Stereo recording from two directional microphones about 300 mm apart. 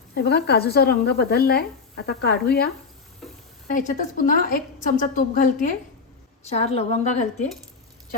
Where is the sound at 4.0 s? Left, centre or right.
Left.